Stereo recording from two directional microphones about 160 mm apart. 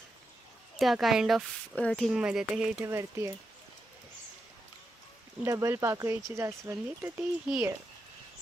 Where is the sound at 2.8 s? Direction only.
15° right (ahead or behind).